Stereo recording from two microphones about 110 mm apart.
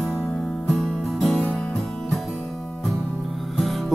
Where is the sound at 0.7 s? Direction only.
5° left (ahead or behind).